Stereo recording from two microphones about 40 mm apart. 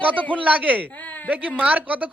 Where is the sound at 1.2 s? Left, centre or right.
Right.